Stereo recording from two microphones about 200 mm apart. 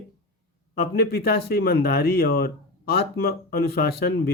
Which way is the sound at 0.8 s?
50° left (ahead or behind).